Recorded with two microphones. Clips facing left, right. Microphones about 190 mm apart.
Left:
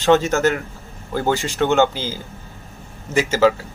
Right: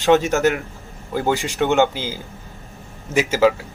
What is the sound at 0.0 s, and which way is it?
Speech, 15° right (ahead or behind).